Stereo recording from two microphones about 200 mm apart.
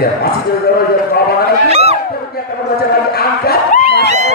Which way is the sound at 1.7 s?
30° right (ahead or behind).